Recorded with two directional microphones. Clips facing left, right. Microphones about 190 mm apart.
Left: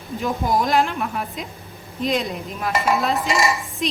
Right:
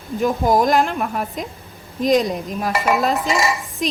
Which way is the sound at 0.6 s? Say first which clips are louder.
Right 3 dB; 50° right (ahead or behind).